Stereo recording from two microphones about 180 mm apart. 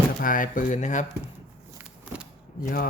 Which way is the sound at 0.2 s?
50° left (ahead or behind).